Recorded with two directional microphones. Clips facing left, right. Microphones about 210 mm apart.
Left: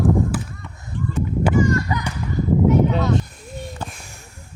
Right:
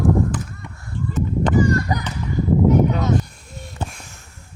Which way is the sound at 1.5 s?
35° right (ahead or behind).